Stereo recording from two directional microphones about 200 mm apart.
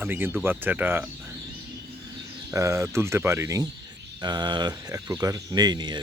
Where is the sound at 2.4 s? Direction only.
15° right (ahead or behind).